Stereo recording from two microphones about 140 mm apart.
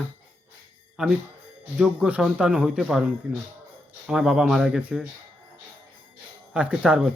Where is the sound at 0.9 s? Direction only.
5° right (ahead or behind).